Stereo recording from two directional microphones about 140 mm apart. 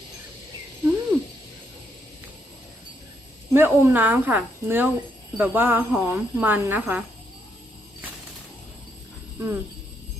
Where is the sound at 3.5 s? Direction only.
15° right (ahead or behind).